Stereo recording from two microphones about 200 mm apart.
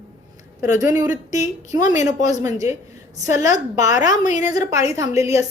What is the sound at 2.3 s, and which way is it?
A woman's voice, 15° right (ahead or behind).